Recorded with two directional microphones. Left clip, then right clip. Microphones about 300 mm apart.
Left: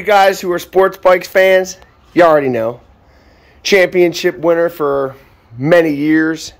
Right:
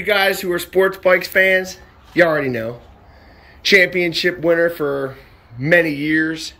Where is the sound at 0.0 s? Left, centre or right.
Centre.